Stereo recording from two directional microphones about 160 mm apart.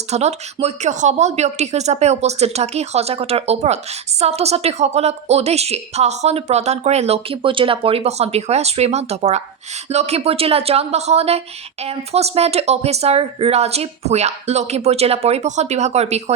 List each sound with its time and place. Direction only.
0.1 s a woman's voice: 45° right (ahead or behind)